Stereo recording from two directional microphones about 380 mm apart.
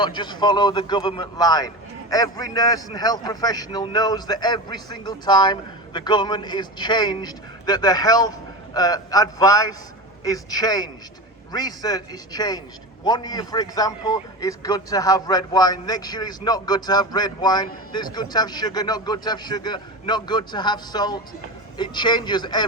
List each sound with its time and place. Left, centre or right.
0.0 s a man's voice: centre